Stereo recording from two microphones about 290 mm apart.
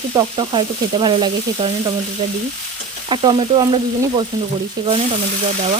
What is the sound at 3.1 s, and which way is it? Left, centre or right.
Frying, centre.